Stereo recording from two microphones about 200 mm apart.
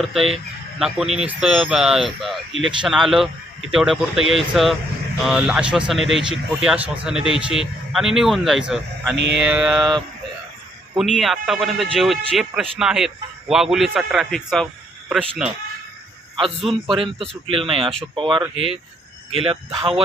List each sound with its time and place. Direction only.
0.0 s speech: centre (ahead or behind)
9.1 s mantra: 65° right (ahead or behind)
9.5 s speech: centre (ahead or behind)
10.9 s speech: centre (ahead or behind)
16.3 s a man's voice: 25° right (ahead or behind)